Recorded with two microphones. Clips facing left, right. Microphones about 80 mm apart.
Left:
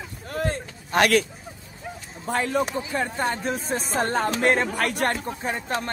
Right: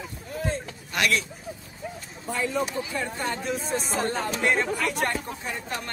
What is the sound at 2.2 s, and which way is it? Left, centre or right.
Speech, left.